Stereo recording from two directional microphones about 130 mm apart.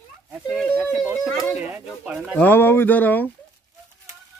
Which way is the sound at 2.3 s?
15° left (ahead or behind).